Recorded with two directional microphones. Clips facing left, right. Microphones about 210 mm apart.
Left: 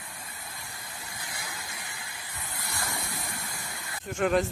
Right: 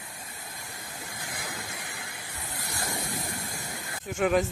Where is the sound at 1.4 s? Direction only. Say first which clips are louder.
Right 4 dB; 55° right (ahead or behind).